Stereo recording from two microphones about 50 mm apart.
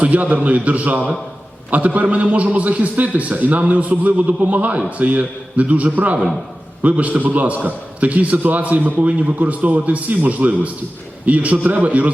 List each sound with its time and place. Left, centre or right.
0.0 s a man's voice: right